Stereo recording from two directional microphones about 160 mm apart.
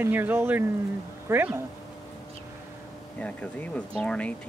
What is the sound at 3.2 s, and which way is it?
Speech, 10° left (ahead or behind).